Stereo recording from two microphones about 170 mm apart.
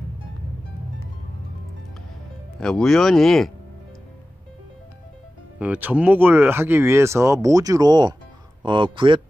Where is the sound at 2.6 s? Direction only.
5° left (ahead or behind).